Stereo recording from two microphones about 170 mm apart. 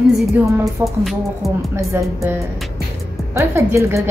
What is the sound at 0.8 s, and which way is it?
Speech, 15° right (ahead or behind).